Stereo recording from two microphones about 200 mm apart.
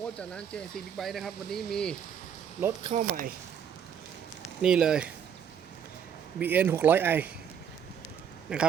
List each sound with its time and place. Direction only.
0.0 s speech: 5° left (ahead or behind)
2.8 s speech: 30° right (ahead or behind)
4.6 s speech: 5° right (ahead or behind)
6.4 s speech: 10° right (ahead or behind)
8.5 s speech: 5° right (ahead or behind)